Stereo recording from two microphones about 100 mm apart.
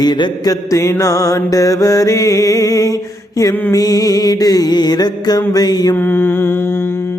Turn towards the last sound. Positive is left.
turn(degrees=25)  # may be behind; listen again after turning